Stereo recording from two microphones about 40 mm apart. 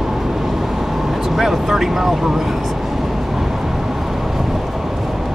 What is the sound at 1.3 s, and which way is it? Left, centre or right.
Vehicle, centre.